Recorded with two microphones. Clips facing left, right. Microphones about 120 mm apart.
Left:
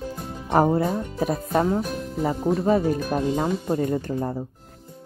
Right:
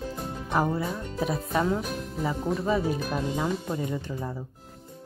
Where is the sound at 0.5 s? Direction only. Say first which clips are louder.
Left 7 dB; 50° left (ahead or behind).